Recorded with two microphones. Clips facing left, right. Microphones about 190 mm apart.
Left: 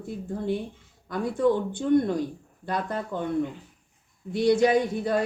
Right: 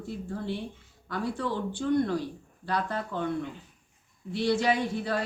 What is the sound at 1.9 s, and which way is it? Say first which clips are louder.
Speech: left 4 dB; 20° left (ahead or behind).